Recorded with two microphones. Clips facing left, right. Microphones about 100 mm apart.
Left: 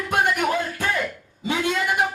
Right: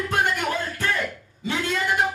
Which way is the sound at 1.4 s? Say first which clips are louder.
Left 3 dB; 15° left (ahead or behind).